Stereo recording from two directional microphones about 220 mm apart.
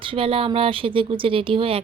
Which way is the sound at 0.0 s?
25° right (ahead or behind).